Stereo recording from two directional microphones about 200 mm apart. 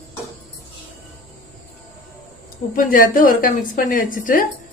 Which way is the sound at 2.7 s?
45° left (ahead or behind).